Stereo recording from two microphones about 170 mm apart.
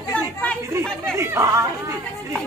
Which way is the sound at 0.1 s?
5° left (ahead or behind).